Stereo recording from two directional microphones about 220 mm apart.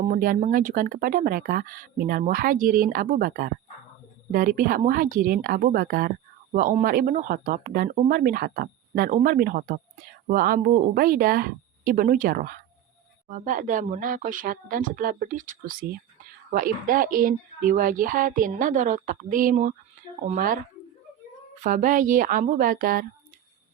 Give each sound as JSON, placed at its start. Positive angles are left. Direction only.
{"t": 0.0, "sound": "speech", "side_deg": -40}
{"t": 21.6, "sound": "speech", "side_deg": -35}